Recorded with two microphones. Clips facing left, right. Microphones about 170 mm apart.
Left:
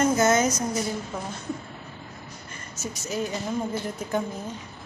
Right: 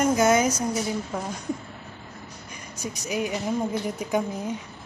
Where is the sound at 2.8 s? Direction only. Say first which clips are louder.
Right 1 dB; 15° right (ahead or behind).